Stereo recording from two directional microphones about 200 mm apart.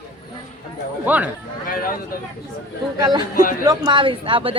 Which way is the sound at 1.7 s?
45° left (ahead or behind).